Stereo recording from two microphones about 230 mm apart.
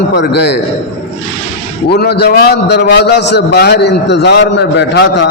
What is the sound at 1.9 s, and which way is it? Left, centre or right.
A man's voice, left.